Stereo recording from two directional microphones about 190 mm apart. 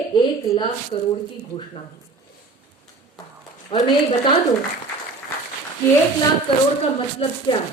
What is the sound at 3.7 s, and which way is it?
Speech, 25° left (ahead or behind).